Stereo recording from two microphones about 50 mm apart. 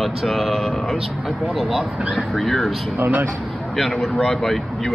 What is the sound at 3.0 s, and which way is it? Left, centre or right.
Speech, right.